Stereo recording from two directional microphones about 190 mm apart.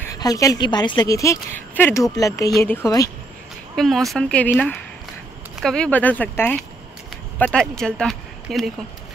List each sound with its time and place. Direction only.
0.1 s a woman's voice: 20° left (ahead or behind)
3.7 s a woman's voice: centre (ahead or behind)